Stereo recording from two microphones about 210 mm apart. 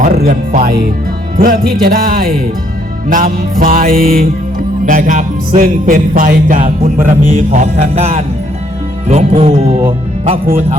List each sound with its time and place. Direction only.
0.0 s speech: 40° right (ahead or behind)
1.4 s music: 40° right (ahead or behind)